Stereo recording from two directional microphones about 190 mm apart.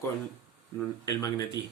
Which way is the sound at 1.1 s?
20° left (ahead or behind).